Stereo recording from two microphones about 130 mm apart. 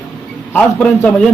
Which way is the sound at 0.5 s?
15° left (ahead or behind).